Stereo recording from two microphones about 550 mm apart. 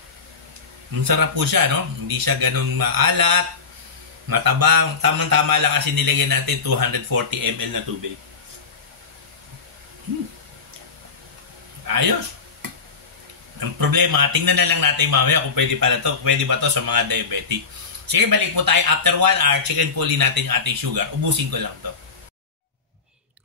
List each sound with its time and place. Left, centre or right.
1.0 s a man's voice: right
11.9 s a man's voice: right
13.6 s a man's voice: right